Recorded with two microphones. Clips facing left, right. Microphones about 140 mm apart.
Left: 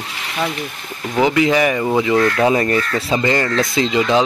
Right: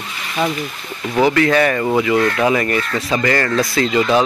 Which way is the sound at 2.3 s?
30° left (ahead or behind).